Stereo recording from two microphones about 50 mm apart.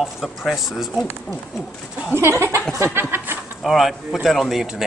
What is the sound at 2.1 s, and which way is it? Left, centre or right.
Speech, right.